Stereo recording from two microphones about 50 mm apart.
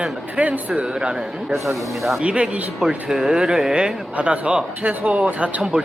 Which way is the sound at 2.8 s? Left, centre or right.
Centre.